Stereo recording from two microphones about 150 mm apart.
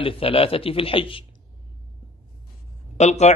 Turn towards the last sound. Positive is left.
turn(degrees=45)  # may be behind; listen again after turning